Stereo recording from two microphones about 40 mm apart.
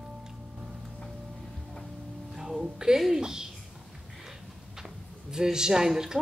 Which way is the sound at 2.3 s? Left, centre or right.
Centre.